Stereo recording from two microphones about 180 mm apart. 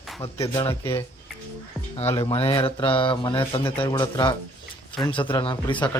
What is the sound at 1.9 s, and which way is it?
Speech, 30° left (ahead or behind).